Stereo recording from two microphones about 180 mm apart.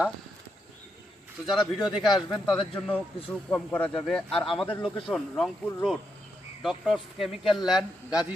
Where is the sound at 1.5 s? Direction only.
Centre (ahead or behind).